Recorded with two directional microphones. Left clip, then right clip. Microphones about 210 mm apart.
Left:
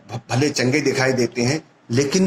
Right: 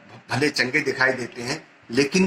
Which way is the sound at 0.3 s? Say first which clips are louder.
Left 2 dB; 35° left (ahead or behind).